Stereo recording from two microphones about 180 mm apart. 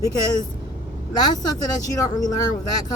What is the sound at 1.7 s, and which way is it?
Speech, 20° left (ahead or behind).